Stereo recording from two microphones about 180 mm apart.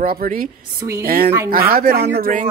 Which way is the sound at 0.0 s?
55° right (ahead or behind).